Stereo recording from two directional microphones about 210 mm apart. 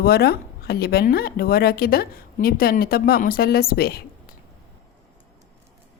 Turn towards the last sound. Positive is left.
turn(degrees=45)  # may be behind; listen again after turning